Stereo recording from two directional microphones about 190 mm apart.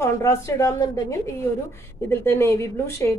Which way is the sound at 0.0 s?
15° left (ahead or behind).